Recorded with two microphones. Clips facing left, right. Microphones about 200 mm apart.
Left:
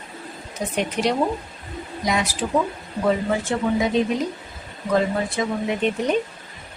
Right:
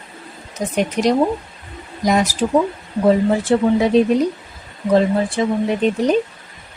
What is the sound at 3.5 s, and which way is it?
Speech, 35° right (ahead or behind).